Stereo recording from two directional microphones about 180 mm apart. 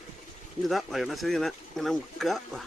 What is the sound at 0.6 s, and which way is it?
Speech, centre (ahead or behind).